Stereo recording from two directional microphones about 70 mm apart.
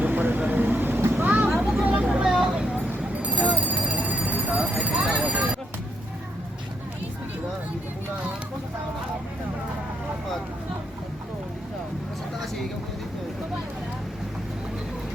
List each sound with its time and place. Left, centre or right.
0.0 s vehicle: right
1.6 s vehicle: centre
5.1 s a sound: centre